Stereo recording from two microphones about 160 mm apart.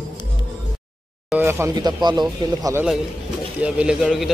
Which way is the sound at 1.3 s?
15° right (ahead or behind).